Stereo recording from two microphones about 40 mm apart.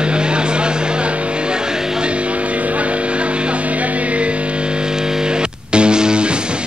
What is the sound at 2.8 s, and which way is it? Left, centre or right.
Music, right.